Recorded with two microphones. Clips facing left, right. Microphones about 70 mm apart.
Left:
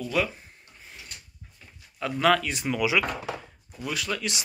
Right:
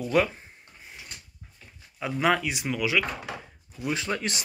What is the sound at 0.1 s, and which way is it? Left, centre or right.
Speech, right.